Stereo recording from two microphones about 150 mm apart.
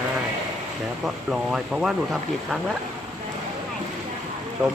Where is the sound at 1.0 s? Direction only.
5° right (ahead or behind).